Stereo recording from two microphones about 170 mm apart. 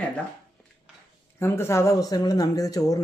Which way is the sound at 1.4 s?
15° left (ahead or behind).